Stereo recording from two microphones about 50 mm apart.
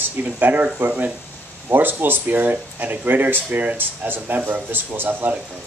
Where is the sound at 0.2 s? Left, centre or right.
Right.